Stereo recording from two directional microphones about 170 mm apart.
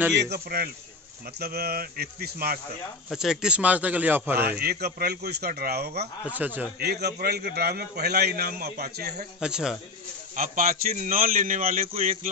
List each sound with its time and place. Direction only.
0.2 s a man's voice: 70° right (ahead or behind)
3.1 s speech: 5° right (ahead or behind)
4.5 s a man's voice: 65° right (ahead or behind)
6.2 s speech: 10° right (ahead or behind)
6.8 s a man's voice: 70° right (ahead or behind)
9.4 s speech: 5° right (ahead or behind)
10.3 s a man's voice: 55° right (ahead or behind)